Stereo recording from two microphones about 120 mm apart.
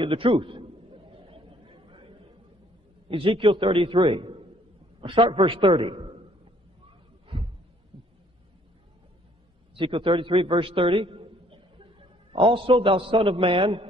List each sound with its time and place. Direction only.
0.0 s a sound: 45° right (ahead or behind)
3.1 s a man's voice: 50° right (ahead or behind)
9.8 s a man's voice: 45° right (ahead or behind)